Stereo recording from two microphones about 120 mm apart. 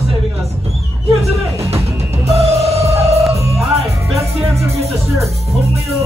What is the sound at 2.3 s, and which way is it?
Music, 60° right (ahead or behind).